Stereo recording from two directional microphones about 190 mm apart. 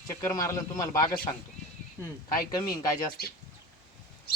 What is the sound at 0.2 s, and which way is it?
A man's voice, 15° left (ahead or behind).